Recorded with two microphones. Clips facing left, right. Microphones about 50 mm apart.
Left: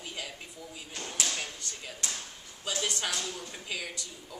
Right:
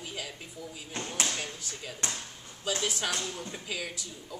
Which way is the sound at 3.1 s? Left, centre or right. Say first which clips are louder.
Right 1 dB; right.